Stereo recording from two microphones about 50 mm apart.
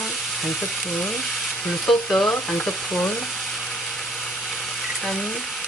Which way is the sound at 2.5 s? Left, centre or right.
Centre.